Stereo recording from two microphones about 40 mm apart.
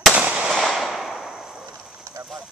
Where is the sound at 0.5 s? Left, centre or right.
Centre.